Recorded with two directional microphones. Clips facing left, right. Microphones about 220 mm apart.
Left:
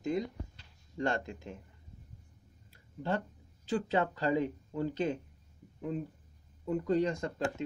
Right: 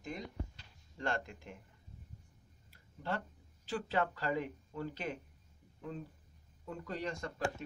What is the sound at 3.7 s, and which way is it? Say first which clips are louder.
Speech: left 5 dB; 20° left (ahead or behind).